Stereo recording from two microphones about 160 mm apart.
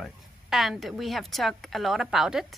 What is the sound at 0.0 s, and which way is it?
Speech, centre (ahead or behind).